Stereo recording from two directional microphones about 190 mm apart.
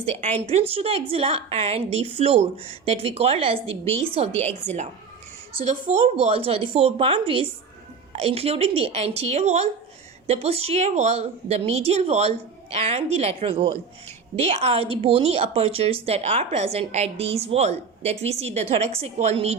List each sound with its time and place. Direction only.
0.0 s a woman's voice: 35° right (ahead or behind)
6.1 s a woman's voice: 30° right (ahead or behind)